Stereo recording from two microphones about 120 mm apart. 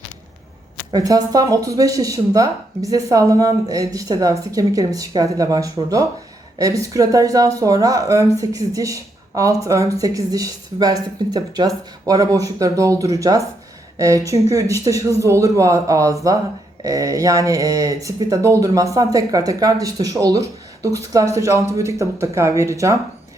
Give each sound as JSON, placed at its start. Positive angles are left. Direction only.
{"t": 0.9, "sound": "speech", "side_deg": -30}